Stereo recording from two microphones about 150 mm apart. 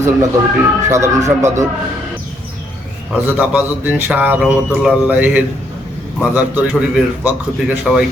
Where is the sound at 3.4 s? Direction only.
10° right (ahead or behind).